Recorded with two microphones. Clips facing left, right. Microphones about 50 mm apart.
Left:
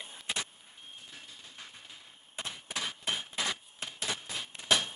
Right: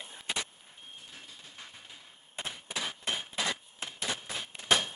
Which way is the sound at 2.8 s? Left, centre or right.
Centre.